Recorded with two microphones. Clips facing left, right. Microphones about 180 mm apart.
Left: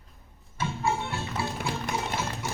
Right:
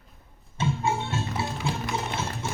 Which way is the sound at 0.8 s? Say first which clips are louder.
Left 1 dB; 15° right (ahead or behind).